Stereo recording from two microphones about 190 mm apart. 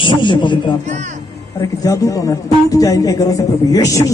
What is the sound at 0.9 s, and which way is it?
Speech, 40° right (ahead or behind).